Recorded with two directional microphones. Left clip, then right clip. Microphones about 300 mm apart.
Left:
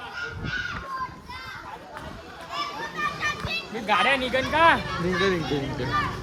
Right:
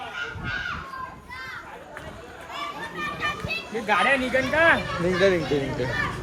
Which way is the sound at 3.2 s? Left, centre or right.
Left.